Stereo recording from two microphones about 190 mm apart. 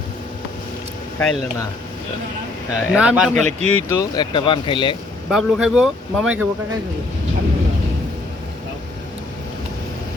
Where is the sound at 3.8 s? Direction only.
15° left (ahead or behind).